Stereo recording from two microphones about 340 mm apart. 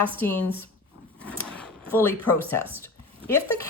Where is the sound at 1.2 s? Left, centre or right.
Centre.